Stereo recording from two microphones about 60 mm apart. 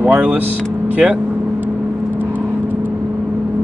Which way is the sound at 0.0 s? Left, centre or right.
Right.